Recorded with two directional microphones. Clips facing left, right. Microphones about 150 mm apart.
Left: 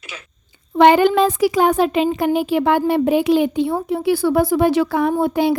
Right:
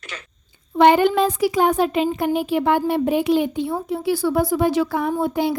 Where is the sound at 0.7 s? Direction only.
90° left.